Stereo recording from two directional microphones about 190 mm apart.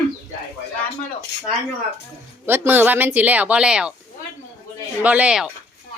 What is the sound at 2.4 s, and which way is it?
Speech, 10° right (ahead or behind).